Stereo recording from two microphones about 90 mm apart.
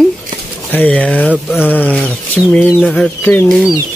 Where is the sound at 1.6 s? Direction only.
20° left (ahead or behind).